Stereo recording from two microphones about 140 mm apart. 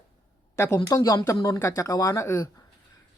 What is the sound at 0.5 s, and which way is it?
A woman's voice, 20° left (ahead or behind).